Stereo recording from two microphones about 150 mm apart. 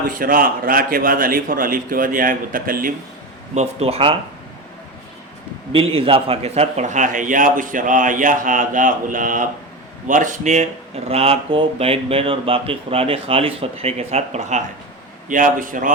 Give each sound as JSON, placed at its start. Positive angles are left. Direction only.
{"t": 0.1, "sound": "a man's voice", "side_deg": -65}
{"t": 3.5, "sound": "speech", "side_deg": -45}
{"t": 5.7, "sound": "a man's voice", "side_deg": -40}
{"t": 15.3, "sound": "a man's voice", "side_deg": -60}